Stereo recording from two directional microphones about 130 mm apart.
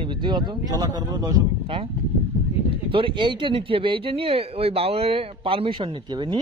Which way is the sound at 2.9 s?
40° right (ahead or behind).